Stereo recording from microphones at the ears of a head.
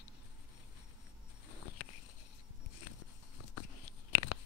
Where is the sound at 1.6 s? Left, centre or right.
Left.